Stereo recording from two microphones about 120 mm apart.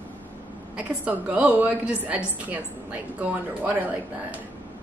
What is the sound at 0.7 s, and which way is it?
A woman's voice, 10° right (ahead or behind).